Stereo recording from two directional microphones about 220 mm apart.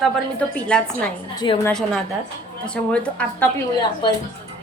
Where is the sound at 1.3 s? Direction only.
20° left (ahead or behind).